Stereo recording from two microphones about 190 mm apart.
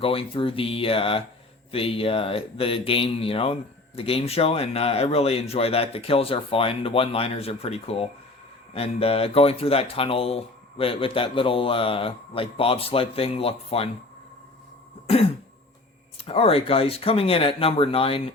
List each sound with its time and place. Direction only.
0.0 s speech: 30° left (ahead or behind)
15.0 s throat clearing: 30° left (ahead or behind)
16.1 s speech: 30° left (ahead or behind)